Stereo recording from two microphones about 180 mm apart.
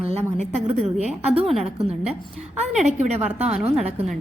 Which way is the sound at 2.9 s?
40° right (ahead or behind).